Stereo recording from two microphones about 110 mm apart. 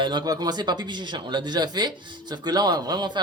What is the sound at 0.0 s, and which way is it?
Speech, 40° right (ahead or behind).